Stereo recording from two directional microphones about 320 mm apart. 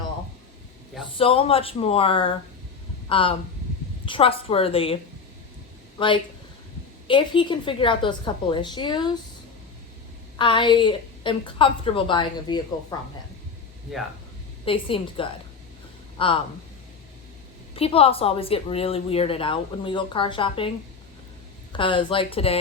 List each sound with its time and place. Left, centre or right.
1.2 s a woman's voice: centre
6.0 s a woman's voice: centre
10.3 s a woman's voice: centre
14.6 s a woman's voice: centre
17.7 s a woman's voice: centre
21.7 s a woman's voice: centre